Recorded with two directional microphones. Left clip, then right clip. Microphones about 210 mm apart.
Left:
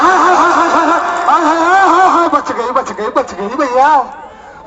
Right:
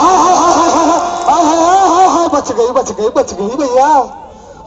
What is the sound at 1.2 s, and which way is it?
Music, 30° right (ahead or behind).